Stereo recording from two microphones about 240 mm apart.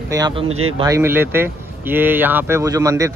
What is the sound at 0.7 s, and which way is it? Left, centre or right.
Speech, centre.